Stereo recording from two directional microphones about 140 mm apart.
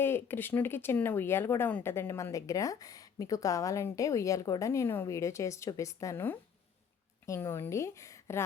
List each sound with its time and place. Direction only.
0.0 s speech: 15° left (ahead or behind)